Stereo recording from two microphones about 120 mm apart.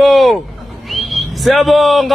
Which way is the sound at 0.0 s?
Centre (ahead or behind).